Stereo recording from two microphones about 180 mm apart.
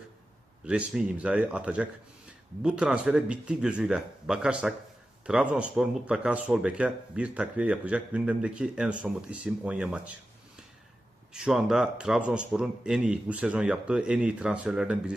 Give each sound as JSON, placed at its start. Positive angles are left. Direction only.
{"t": 0.6, "sound": "speech", "side_deg": -5}
{"t": 11.3, "sound": "speech", "side_deg": -5}